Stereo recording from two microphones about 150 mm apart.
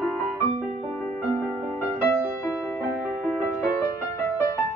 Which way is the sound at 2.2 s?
10° right (ahead or behind).